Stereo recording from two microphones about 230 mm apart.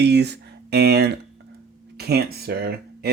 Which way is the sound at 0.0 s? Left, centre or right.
Right.